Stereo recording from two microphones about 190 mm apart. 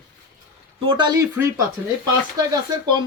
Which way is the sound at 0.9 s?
25° right (ahead or behind).